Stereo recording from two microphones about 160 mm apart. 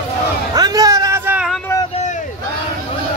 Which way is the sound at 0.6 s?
25° right (ahead or behind).